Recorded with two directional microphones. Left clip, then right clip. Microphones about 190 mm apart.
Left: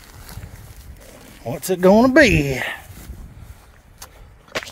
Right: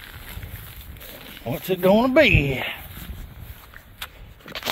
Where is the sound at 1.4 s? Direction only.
55° left (ahead or behind).